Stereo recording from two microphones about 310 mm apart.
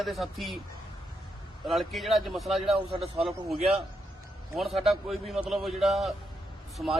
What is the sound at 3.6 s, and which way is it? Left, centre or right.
Speech, centre.